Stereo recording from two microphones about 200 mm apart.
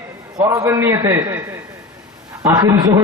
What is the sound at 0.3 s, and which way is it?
A man's voice, 15° right (ahead or behind).